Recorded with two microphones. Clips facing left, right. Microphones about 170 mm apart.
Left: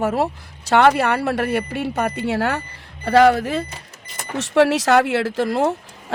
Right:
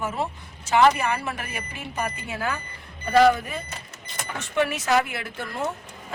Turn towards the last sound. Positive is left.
turn(degrees=90)